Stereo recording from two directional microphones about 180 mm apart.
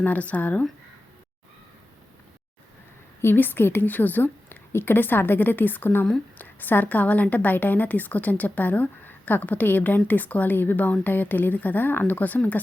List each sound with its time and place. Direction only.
0.0 s a woman's voice: 10° left (ahead or behind)
3.2 s a woman's voice: 10° left (ahead or behind)